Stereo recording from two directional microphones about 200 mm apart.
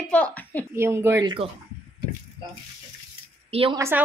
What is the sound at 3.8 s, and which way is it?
Speech, 10° right (ahead or behind).